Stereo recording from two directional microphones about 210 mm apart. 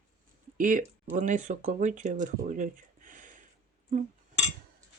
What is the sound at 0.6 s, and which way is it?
Speech, 40° right (ahead or behind).